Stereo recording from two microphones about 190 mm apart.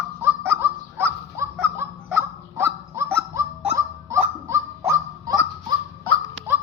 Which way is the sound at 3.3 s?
15° right (ahead or behind).